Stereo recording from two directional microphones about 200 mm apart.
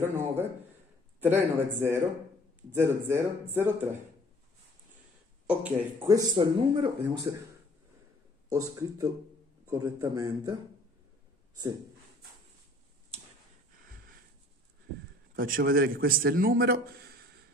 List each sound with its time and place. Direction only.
1.2 s speech: 10° right (ahead or behind)
5.5 s speech: 10° right (ahead or behind); by 7.3 s 25° right (ahead or behind)
8.5 s speech: 15° right (ahead or behind)
15.3 s a man's voice: 45° right (ahead or behind)